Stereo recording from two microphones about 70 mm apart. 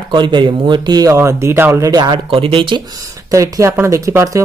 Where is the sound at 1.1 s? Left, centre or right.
Right.